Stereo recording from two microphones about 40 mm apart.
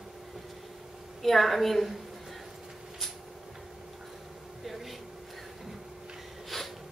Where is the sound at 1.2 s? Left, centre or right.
Centre.